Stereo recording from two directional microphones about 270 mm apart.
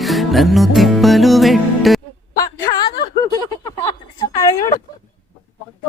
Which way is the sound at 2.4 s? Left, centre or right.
Centre.